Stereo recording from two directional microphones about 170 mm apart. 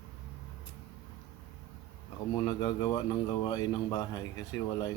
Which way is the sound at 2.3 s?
25° left (ahead or behind).